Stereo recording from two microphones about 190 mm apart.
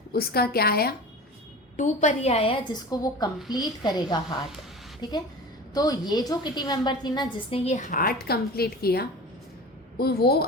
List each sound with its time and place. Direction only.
0.1 s a woman's voice: 55° left (ahead or behind)
1.7 s a woman's voice: 40° left (ahead or behind); by 4.4 s 20° left (ahead or behind)
5.7 s a woman's voice: 20° left (ahead or behind); by 10.4 s 55° left (ahead or behind)